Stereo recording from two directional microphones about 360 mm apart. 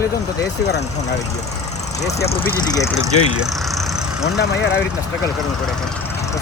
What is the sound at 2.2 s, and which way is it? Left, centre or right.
Speech, left.